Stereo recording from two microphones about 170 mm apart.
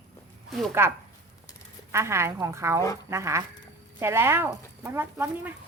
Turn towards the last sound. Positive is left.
turn(degrees=-15)  # may be behind; listen again after turning